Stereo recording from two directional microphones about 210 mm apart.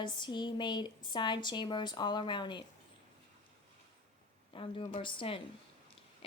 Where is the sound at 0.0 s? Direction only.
20° left (ahead or behind).